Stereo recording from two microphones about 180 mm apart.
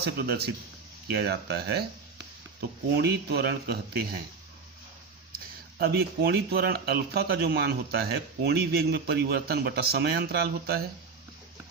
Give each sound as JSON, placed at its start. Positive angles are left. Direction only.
{"t": 0.2, "sound": "speech", "side_deg": -60}
{"t": 5.8, "sound": "speech", "side_deg": -60}